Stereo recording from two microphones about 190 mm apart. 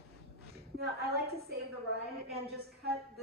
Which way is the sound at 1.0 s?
55° right (ahead or behind).